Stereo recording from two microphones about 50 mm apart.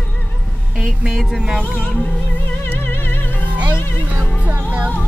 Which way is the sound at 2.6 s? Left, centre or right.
Left.